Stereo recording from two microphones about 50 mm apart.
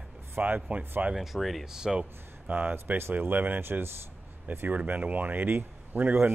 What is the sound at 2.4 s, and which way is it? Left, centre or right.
Speech, right.